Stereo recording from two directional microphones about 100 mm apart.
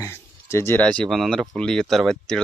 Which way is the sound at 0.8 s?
10° left (ahead or behind).